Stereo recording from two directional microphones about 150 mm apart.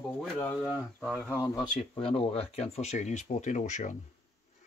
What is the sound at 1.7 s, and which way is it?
Speech, 40° left (ahead or behind).